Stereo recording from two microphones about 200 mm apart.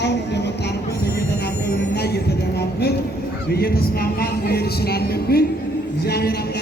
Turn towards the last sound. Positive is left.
turn(degrees=50)  # may be behind; listen again after turning